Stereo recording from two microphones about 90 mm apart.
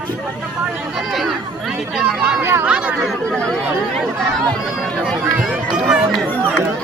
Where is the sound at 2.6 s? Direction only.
10° right (ahead or behind).